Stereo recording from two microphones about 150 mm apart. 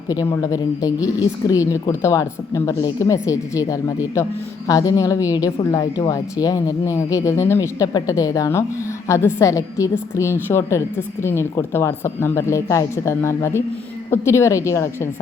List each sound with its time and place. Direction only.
0.1 s a woman's voice: 20° left (ahead or behind)